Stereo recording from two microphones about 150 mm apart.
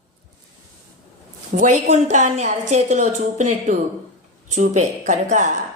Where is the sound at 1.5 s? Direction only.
50° right (ahead or behind).